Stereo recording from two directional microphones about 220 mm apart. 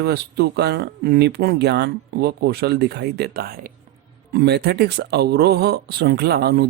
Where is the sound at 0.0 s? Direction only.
45° right (ahead or behind).